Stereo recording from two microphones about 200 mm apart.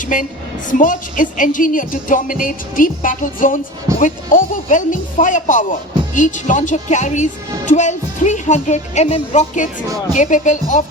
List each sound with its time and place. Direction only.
0.0 s a woman's voice: 40° left (ahead or behind)